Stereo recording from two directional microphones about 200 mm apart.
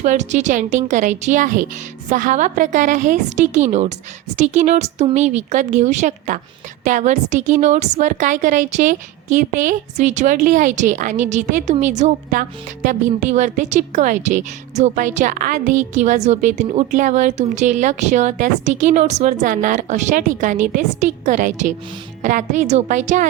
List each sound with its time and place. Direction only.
0.0 s a woman's voice: 35° right (ahead or behind)